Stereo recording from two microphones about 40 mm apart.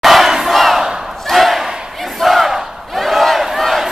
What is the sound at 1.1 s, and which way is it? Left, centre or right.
Battle cry, centre.